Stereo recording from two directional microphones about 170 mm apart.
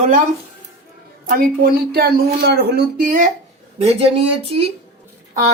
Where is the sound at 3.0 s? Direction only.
50° right (ahead or behind).